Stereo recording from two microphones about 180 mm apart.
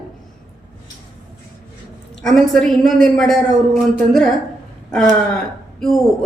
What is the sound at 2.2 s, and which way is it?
A woman's voice, centre (ahead or behind).